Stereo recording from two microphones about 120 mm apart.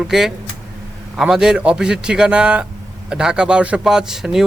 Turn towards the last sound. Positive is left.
turn(degrees=-5)  # may be behind; listen again after turning